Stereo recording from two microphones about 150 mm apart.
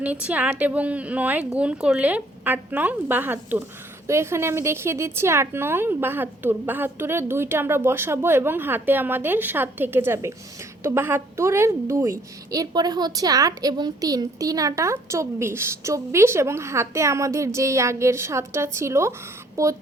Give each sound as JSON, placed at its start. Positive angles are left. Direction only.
{"t": 0.0, "sound": "a woman's voice", "side_deg": -10}